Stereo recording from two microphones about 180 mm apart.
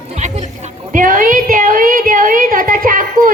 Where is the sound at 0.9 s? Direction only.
50° right (ahead or behind).